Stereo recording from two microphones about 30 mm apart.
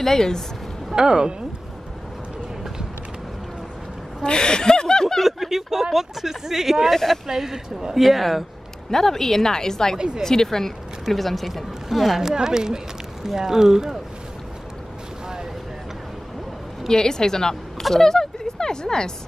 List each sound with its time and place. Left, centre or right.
0.0 s a woman's voice: centre
0.9 s a woman's voice: right
4.2 s speech: left
5.2 s speech: centre
7.9 s speech: centre
8.9 s a woman's voice: centre
9.9 s a woman's voice: right
10.2 s a woman's voice: centre
11.1 s speech: centre
11.9 s speech: centre
16.9 s speech: left